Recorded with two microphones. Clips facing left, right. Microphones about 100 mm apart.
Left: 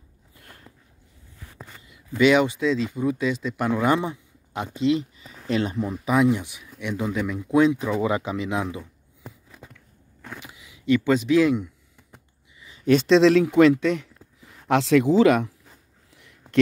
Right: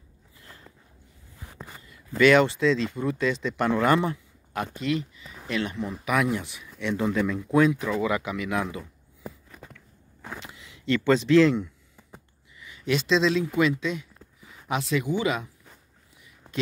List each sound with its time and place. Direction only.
1.9 s speech: 15° left (ahead or behind); by 5.9 s 30° left (ahead or behind)
6.3 s speech: 15° left (ahead or behind)
8.0 s speech: 30° left (ahead or behind)
10.4 s speech: 10° left (ahead or behind)
12.5 s a sound: 25° left (ahead or behind)
12.8 s speech: 50° left (ahead or behind); by 15.5 s 70° left (ahead or behind)
16.2 s a sound: 70° left (ahead or behind)